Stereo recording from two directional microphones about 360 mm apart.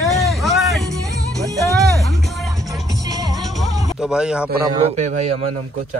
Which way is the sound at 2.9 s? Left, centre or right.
Centre.